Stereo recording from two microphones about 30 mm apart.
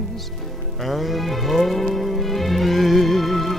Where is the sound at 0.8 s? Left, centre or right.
Centre.